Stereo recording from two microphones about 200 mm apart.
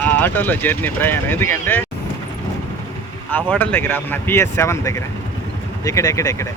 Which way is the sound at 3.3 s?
10° left (ahead or behind).